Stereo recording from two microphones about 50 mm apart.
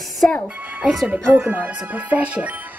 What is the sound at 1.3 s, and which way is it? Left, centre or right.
Speech, right.